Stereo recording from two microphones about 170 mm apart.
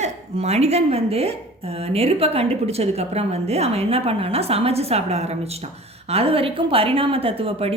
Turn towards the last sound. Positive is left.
turn(degrees=-35)  # may be behind; listen again after turning